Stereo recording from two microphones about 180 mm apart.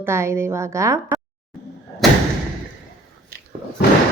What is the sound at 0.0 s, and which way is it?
A woman's voice, 15° right (ahead or behind).